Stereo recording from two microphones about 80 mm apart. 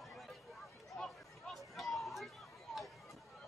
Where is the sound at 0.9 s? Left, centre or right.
Centre.